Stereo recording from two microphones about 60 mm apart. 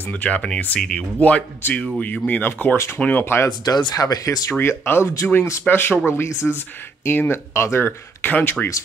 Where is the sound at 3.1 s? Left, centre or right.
Left.